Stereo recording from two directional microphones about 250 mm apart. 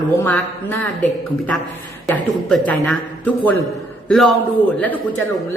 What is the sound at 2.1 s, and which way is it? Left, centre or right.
A man's voice, centre.